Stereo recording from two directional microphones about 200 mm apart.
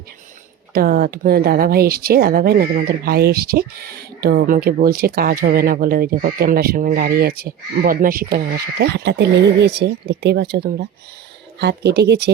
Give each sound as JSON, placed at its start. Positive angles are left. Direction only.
{"t": 0.7, "sound": "speech", "side_deg": -50}